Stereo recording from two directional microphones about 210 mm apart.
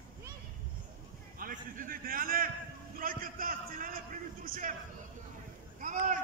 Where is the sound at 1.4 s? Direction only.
40° right (ahead or behind).